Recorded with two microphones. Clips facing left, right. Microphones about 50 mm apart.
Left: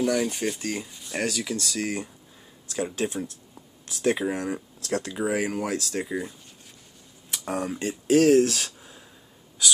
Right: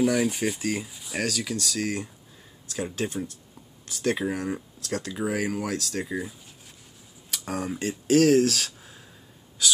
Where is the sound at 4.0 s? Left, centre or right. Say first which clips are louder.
Left 2 dB; centre.